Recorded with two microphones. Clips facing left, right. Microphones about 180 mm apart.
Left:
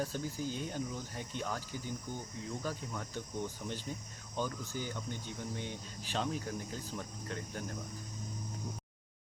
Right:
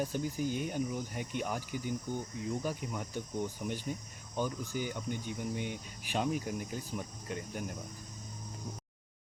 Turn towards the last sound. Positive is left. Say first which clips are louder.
# right 2 dB
turn(degrees=-15)  # may be behind; listen again after turning